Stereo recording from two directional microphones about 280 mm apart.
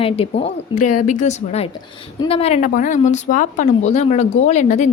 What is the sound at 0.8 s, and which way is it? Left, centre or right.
Speech, left.